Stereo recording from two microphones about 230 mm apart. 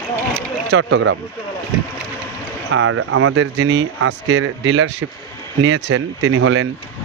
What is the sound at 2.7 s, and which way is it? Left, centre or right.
Speech, right.